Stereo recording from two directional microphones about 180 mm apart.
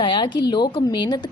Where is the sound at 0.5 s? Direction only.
25° left (ahead or behind).